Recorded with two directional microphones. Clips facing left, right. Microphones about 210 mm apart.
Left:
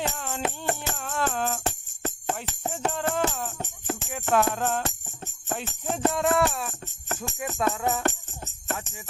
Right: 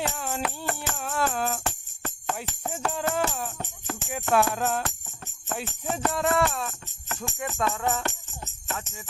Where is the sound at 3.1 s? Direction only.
10° right (ahead or behind).